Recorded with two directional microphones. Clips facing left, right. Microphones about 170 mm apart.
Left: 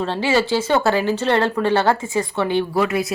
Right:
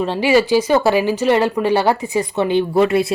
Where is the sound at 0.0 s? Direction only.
15° right (ahead or behind).